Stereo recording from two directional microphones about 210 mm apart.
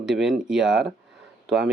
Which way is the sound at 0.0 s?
Centre (ahead or behind).